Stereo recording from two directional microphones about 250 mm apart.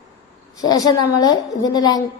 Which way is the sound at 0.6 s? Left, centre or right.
Centre.